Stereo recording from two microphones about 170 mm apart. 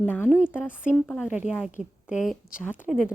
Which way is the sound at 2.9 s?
5° right (ahead or behind).